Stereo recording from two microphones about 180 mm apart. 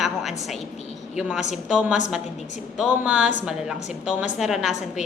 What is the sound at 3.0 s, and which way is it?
A woman's voice, 5° right (ahead or behind).